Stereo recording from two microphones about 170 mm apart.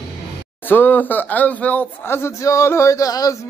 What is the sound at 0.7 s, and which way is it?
Speech, 10° left (ahead or behind).